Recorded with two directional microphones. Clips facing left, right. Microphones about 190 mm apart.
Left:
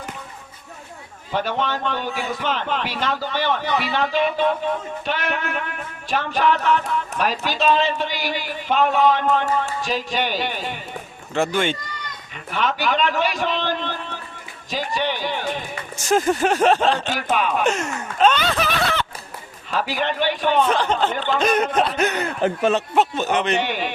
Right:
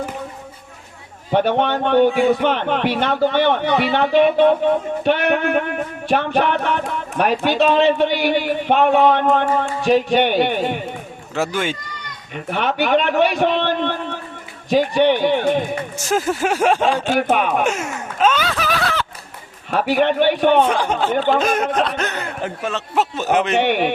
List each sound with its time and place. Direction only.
1.3 s a man's voice: 60° right (ahead or behind)
11.3 s speech: 5° right (ahead or behind)
12.3 s a man's voice: 60° right (ahead or behind)
16.0 s speech: 5° right (ahead or behind)
17.1 s a man's voice: 55° right (ahead or behind)
17.7 s a sound: 5° right (ahead or behind)
19.7 s a man's voice: 60° right (ahead or behind)
20.7 s speech: 10° right (ahead or behind)
21.1 s a man's voice: 55° right (ahead or behind)
21.3 s speech: centre (ahead or behind)
21.8 s a sound: 5° left (ahead or behind)
23.0 s speech: 5° right (ahead or behind)
23.6 s a man's voice: 60° right (ahead or behind)